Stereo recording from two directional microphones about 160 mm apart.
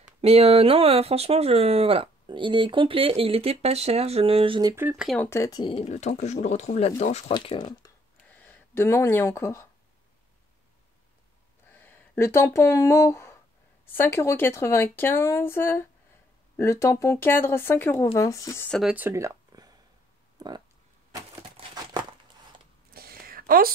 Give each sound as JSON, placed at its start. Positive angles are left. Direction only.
{"t": 0.2, "sound": "speech", "side_deg": -40}
{"t": 4.7, "sound": "speech", "side_deg": -10}
{"t": 5.0, "sound": "speech", "side_deg": 10}
{"t": 7.3, "sound": "speech", "side_deg": 30}
{"t": 8.3, "sound": "speech", "side_deg": 10}
{"t": 11.7, "sound": "speech", "side_deg": 10}
{"t": 18.7, "sound": "speech", "side_deg": -5}
{"t": 19.0, "sound": "a sound", "side_deg": -20}
{"t": 20.3, "sound": "speech", "side_deg": -25}
{"t": 22.9, "sound": "a sound", "side_deg": -70}